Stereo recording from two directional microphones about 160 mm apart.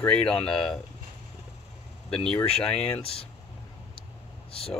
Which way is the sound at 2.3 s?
5° left (ahead or behind).